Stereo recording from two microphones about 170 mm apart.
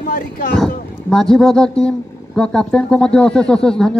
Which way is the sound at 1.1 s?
5° left (ahead or behind).